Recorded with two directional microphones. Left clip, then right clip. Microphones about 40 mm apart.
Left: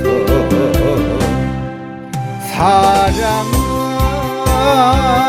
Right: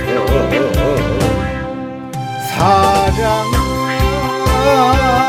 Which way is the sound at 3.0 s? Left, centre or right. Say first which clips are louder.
Even; left.